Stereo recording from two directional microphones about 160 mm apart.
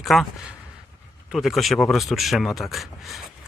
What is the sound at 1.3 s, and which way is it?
Speech, centre (ahead or behind).